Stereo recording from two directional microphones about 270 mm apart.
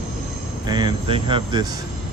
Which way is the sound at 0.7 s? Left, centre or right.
Centre.